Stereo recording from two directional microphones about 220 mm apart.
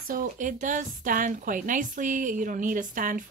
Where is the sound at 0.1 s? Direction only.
35° right (ahead or behind).